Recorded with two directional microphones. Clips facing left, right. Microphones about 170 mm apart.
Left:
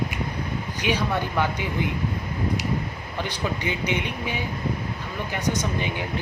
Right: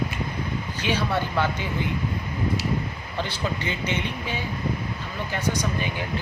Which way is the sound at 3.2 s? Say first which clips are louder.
Even; 15° left (ahead or behind).